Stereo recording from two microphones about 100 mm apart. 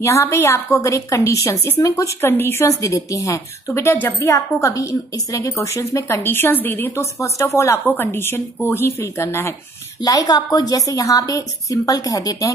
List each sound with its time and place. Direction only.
0.0 s a woman's voice: 30° left (ahead or behind)
7.8 s speech: 20° left (ahead or behind)
10.0 s a woman's voice: 40° left (ahead or behind)